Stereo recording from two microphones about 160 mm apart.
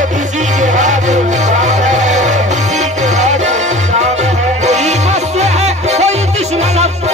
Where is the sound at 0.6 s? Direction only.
50° right (ahead or behind).